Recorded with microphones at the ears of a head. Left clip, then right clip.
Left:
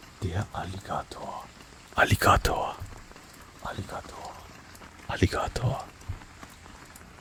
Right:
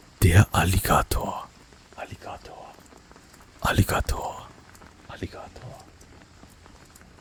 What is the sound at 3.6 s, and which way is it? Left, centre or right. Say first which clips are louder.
Speech: right 12 dB; right.